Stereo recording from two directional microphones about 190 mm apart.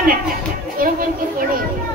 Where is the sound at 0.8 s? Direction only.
50° right (ahead or behind).